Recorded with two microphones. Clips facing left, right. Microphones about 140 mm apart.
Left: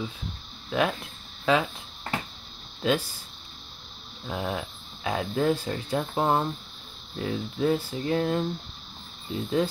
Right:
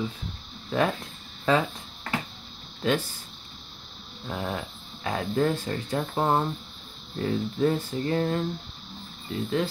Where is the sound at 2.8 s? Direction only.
10° left (ahead or behind).